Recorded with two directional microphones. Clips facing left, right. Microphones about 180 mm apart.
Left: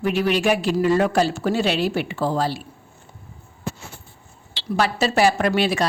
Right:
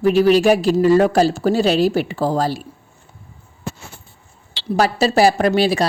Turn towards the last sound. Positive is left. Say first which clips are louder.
# right 4 dB
turn(degrees=-35)  # may be behind; listen again after turning